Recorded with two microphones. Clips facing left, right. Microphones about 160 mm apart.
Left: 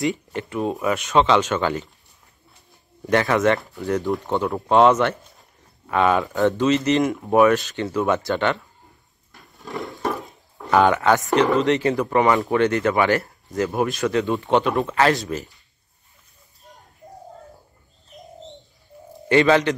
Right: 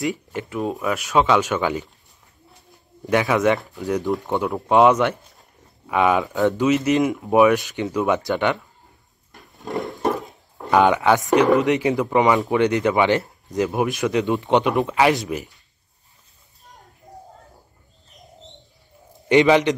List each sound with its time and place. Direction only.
0.0 s speech: 5° right (ahead or behind)
3.1 s speech: 10° right (ahead or behind)
4.6 s speech: 10° right (ahead or behind)
6.2 s speech: centre (ahead or behind)
7.4 s speech: 15° right (ahead or behind)
9.6 s a sound: 20° right (ahead or behind)
10.8 s speech: 15° right (ahead or behind)
19.2 s speech: 15° right (ahead or behind)